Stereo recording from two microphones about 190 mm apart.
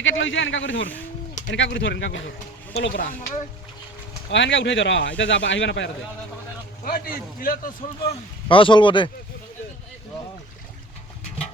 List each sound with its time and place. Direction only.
0.0 s a man's voice: 85° left
2.7 s a man's voice: 55° left (ahead or behind)
4.3 s speech: 75° left (ahead or behind)
6.8 s a man's voice: 50° left (ahead or behind)
8.4 s speech: 25° left (ahead or behind)